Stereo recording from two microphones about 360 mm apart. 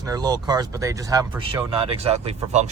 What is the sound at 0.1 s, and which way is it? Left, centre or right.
Speech, centre.